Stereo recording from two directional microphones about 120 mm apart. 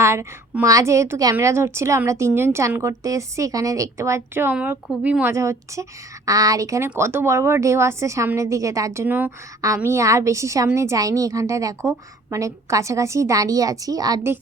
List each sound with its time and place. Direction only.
0.0 s a woman's voice: 25° right (ahead or behind)
9.6 s a woman's voice: 25° right (ahead or behind)